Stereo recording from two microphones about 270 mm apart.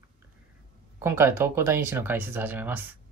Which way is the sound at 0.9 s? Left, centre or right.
Centre.